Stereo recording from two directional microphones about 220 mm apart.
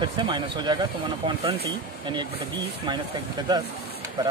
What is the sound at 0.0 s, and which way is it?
Speech, 20° right (ahead or behind).